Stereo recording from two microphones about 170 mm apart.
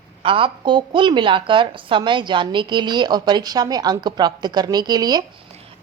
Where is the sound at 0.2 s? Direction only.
30° right (ahead or behind).